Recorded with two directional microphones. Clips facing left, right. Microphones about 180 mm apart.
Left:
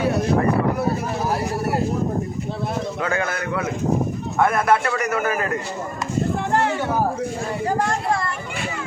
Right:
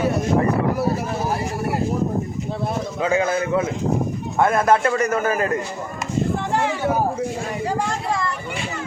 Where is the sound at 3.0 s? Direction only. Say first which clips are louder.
Right 7 dB; 15° right (ahead or behind).